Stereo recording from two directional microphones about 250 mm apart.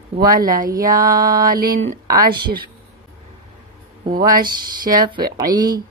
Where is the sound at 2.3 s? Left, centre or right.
Right.